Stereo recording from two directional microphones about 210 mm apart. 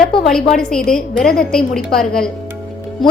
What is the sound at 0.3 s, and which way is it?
A woman's voice, 5° left (ahead or behind).